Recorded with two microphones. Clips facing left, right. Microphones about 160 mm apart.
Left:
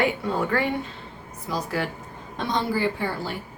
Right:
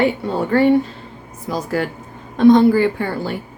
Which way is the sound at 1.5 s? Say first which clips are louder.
Right 6 dB; 45° right (ahead or behind).